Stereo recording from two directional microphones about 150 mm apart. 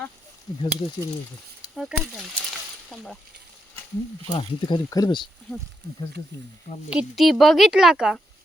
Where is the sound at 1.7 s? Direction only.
Centre (ahead or behind).